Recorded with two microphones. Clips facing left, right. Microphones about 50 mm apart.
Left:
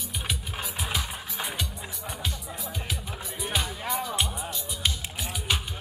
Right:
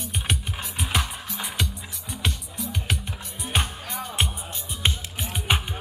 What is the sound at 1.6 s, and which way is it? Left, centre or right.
Music, right.